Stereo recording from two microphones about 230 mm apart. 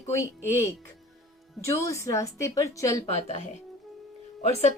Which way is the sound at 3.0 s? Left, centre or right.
Left.